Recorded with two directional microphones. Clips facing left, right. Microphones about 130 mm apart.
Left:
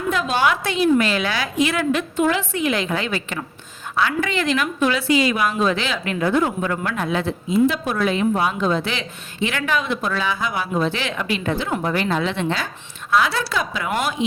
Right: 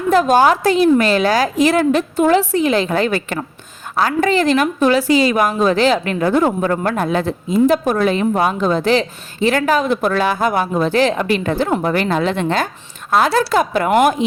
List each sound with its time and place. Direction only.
0.1 s a woman's voice: 45° right (ahead or behind)